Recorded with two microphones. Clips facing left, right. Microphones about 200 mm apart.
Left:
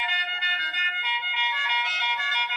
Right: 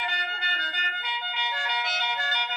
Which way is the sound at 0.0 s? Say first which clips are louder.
Right 1 dB; 45° right (ahead or behind).